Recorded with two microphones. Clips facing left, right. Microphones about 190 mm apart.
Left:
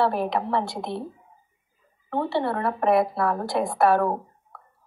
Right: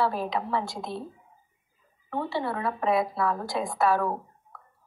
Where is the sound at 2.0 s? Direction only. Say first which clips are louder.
Left 5 dB; 60° left (ahead or behind).